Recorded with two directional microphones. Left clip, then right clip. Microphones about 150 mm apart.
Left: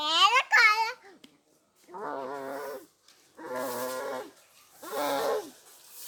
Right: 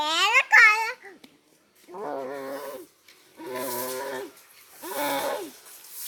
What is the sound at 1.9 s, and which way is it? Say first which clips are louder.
Roaring cats: right 3 dB; 30° right (ahead or behind).